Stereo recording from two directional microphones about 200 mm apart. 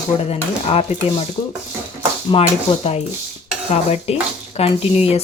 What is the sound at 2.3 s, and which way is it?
Speech, 25° left (ahead or behind).